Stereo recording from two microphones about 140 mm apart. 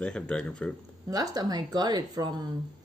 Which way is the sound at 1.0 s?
25° right (ahead or behind).